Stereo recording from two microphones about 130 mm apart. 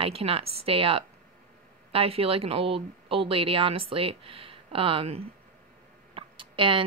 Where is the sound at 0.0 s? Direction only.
45° right (ahead or behind).